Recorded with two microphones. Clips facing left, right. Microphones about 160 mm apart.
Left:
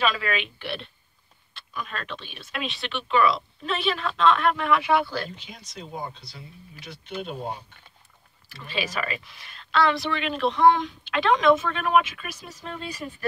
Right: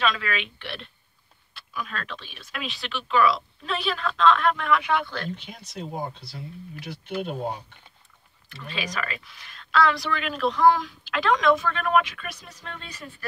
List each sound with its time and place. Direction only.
0.0 s speech: 5° left (ahead or behind)
5.7 s speech: 55° right (ahead or behind)
8.6 s speech: 5° left (ahead or behind)